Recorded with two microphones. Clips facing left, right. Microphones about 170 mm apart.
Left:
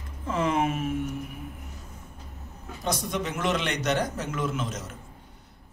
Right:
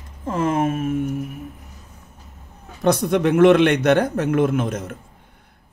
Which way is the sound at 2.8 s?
60° right (ahead or behind).